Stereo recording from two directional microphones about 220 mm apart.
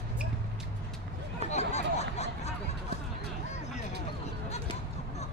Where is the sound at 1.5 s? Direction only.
30° left (ahead or behind).